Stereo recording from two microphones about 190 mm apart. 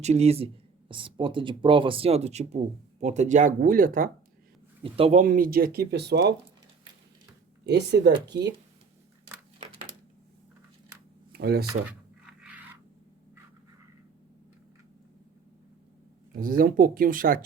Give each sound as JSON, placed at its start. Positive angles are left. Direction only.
{"t": 0.0, "sound": "speech", "side_deg": -35}
{"t": 4.8, "sound": "speech", "side_deg": -30}
{"t": 5.2, "sound": "speech", "side_deg": -45}
{"t": 7.6, "sound": "speech", "side_deg": -60}
{"t": 11.3, "sound": "a sound", "side_deg": -55}
{"t": 11.9, "sound": "a sound", "side_deg": -5}
{"t": 16.4, "sound": "speech", "side_deg": -45}